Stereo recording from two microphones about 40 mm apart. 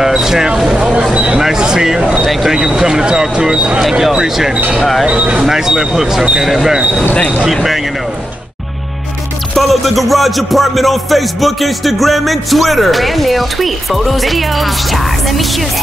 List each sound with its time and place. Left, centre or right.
0.0 s vehicle: centre
1.1 s speech: right
1.4 s speech: centre
4.7 s music: centre
5.0 s speech: right
5.4 s speech: centre
6.4 s music: centre
7.4 s speech: centre
9.6 s music: centre